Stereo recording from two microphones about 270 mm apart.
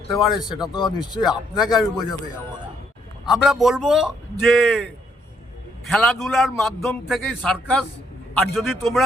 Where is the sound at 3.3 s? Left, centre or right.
Centre.